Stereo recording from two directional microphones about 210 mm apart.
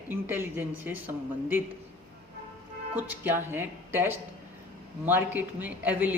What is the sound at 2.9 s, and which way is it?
Speech, 10° right (ahead or behind).